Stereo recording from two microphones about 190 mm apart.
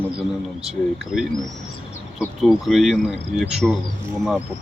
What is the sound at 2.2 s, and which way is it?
Speech, centre (ahead or behind).